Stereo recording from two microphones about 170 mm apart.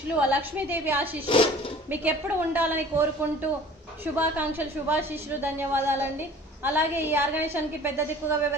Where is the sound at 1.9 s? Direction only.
10° right (ahead or behind).